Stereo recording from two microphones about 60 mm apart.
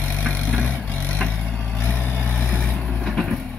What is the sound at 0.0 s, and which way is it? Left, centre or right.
Vehicle, left.